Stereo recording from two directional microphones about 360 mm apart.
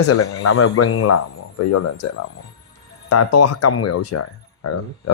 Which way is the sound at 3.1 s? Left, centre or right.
Left.